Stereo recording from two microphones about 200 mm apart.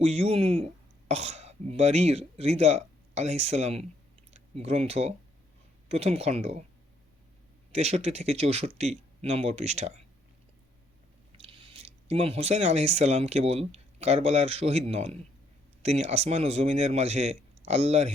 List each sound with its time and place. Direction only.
0.0 s a man's voice: 30° right (ahead or behind)
7.7 s a man's voice: 35° right (ahead or behind)
11.3 s a man's voice: 30° right (ahead or behind)